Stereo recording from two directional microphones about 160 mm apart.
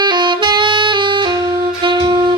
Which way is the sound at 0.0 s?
30° right (ahead or behind).